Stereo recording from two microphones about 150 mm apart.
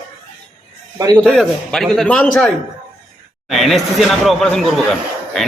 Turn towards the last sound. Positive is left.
turn(degrees=0)  # may be behind; listen again after turning